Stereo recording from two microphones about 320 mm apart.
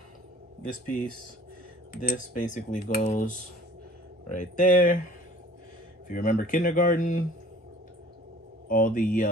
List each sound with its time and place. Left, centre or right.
0.7 s speech: left
6.0 s speech: left
8.6 s speech: left